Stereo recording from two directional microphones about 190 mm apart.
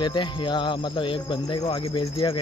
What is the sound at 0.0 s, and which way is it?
Speech, 25° left (ahead or behind).